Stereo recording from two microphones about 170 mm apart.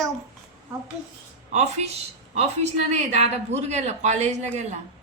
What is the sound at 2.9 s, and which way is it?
Speech, 40° right (ahead or behind).